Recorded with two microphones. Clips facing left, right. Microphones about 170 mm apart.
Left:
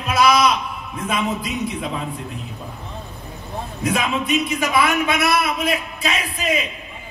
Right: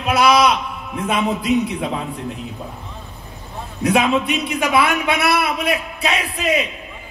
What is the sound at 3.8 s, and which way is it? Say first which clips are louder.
A man's voice: right 6 dB; 65° right (ahead or behind).